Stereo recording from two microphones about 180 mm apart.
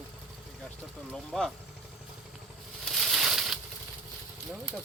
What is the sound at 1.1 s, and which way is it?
Speech, centre (ahead or behind).